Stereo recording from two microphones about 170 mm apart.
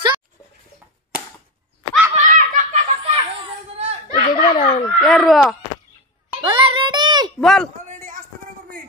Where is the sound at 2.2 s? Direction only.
45° right (ahead or behind).